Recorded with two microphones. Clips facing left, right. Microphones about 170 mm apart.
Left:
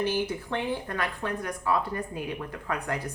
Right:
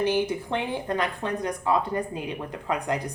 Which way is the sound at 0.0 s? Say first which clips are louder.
Right 4 dB; 20° right (ahead or behind).